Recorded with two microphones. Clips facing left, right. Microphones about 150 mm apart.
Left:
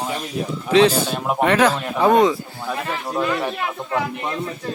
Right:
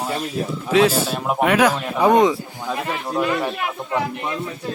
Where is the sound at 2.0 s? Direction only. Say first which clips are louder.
Even; 20° right (ahead or behind).